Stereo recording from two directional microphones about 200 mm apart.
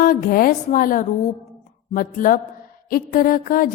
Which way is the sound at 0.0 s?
45° left (ahead or behind).